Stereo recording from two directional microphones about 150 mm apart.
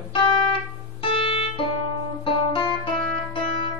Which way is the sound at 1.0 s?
35° left (ahead or behind).